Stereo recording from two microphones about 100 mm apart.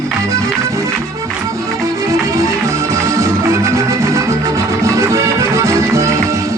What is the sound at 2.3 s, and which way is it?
Music, 30° right (ahead or behind).